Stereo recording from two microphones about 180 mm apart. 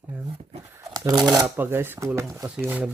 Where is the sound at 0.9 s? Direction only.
20° right (ahead or behind).